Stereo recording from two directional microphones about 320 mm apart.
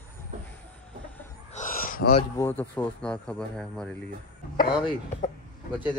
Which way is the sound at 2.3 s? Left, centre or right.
Centre.